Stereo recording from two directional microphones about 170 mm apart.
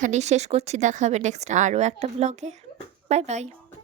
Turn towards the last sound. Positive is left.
turn(degrees=-40)  # may be behind; listen again after turning